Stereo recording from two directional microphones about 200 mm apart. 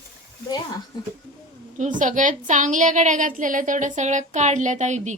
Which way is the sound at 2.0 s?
40° right (ahead or behind).